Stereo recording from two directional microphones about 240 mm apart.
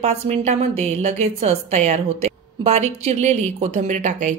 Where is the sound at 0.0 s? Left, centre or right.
Right.